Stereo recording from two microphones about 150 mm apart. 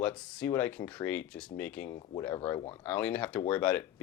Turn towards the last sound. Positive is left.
turn(degrees=10)  # may be behind; listen again after turning